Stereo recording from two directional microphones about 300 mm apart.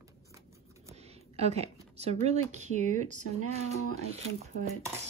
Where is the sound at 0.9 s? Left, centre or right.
Right.